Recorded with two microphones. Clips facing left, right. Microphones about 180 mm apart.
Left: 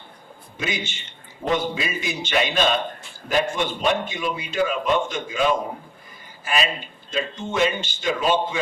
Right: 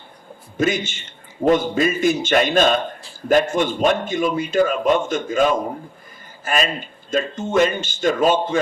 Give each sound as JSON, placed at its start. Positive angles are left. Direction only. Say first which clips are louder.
{"t": 0.5, "sound": "a man's voice", "louder": "right 9 dB", "side_deg": -45}